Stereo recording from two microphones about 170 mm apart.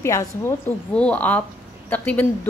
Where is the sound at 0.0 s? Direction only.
15° left (ahead or behind).